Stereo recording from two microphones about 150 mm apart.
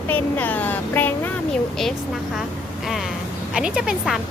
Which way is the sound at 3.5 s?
5° right (ahead or behind).